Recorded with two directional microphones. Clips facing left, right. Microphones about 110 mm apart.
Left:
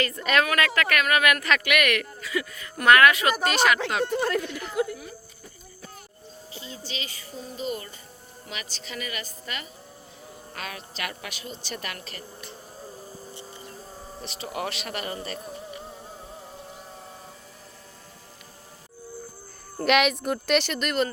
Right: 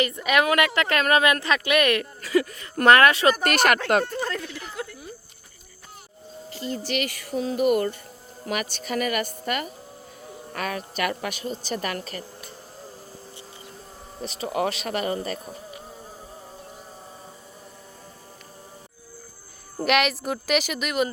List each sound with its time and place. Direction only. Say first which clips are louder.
0.0 s speech: right 2 dB; 10° right (ahead or behind)
0.4 s speech: right 3 dB; 20° right (ahead or behind)
2.3 s speech: right 8 dB; 40° right (ahead or behind)
3.4 s speech: right 2 dB; 55° right (ahead or behind)
4.0 s speech: left 4 dB; 10° left (ahead or behind)
6.7 s a woman's voice: right 11 dB; 70° right (ahead or behind); by 12.2 s 40° right (ahead or behind)
14.2 s speech: right 7 dB; 35° right (ahead or behind)
19.7 s a woman's voice: left 1 dB; 5° right (ahead or behind)